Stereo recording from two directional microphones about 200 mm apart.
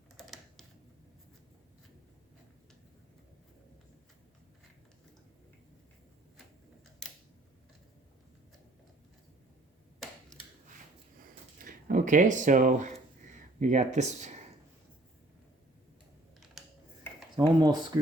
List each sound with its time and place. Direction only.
0.2 s typing: centre (ahead or behind)
11.6 s speech: 40° right (ahead or behind)
16.6 s a sound: centre (ahead or behind)
17.3 s speech: 20° right (ahead or behind)